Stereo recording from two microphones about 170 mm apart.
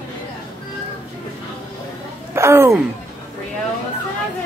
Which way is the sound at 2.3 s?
15° right (ahead or behind).